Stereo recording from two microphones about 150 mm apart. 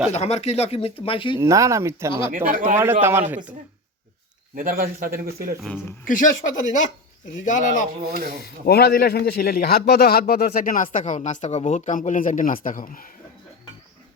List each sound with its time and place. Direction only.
0.1 s speech: 45° left (ahead or behind)
1.4 s speech: 20° right (ahead or behind)
2.3 s speech: 70° right (ahead or behind)
2.7 s a man's voice: 15° right (ahead or behind)
4.5 s speech: 70° right (ahead or behind)
5.5 s speech: centre (ahead or behind)
6.1 s speech: 60° left (ahead or behind)
8.4 s a man's voice: 90° left; by 13.1 s 65° left (ahead or behind)